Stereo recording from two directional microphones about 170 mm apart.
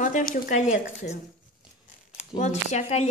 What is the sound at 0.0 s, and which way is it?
Speech, 50° left (ahead or behind).